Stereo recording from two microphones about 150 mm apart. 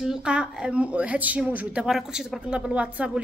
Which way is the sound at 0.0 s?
5° right (ahead or behind).